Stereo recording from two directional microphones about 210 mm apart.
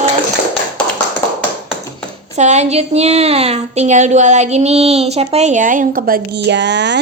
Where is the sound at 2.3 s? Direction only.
35° right (ahead or behind).